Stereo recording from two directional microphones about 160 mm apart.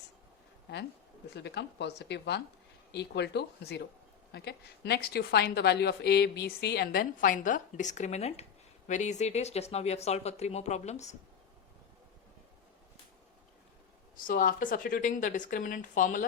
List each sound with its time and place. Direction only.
1.3 s speech: 90° left; by 11.1 s 45° left (ahead or behind)
14.3 s speech: 60° left (ahead or behind)